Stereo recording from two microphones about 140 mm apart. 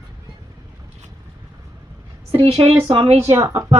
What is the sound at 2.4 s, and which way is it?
Speech, 45° right (ahead or behind).